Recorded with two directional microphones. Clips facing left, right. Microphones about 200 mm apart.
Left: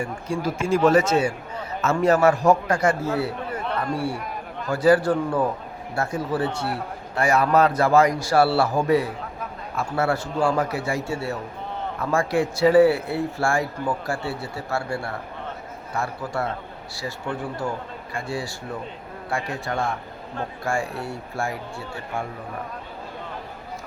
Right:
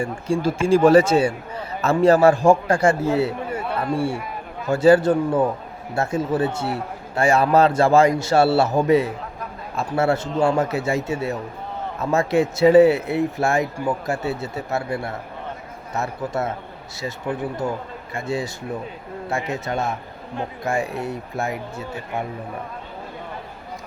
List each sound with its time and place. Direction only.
0.0 s a man's voice: 30° right (ahead or behind)
3.5 s a sound: 10° right (ahead or behind)
3.9 s a man's voice: 25° right (ahead or behind)
17.3 s speech: 10° right (ahead or behind)
18.1 s a man's voice: 20° right (ahead or behind)